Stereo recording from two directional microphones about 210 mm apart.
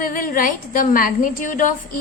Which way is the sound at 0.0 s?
40° left (ahead or behind).